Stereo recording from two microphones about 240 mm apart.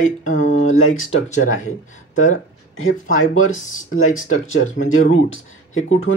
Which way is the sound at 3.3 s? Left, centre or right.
Left.